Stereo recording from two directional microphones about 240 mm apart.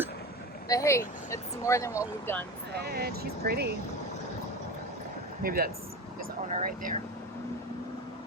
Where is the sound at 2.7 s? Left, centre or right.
Right.